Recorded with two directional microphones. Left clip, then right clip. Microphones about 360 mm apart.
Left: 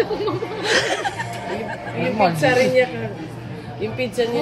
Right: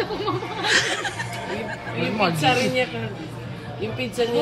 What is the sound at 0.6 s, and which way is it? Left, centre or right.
Speech, centre.